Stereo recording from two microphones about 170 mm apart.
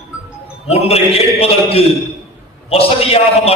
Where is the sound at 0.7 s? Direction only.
35° left (ahead or behind).